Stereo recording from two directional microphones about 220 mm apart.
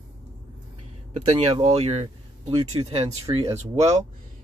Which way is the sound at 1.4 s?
25° right (ahead or behind).